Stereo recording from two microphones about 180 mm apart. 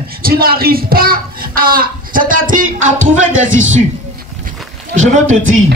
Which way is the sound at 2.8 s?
90° right.